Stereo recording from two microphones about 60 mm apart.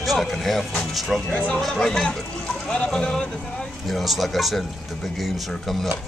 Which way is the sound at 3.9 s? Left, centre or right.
Centre.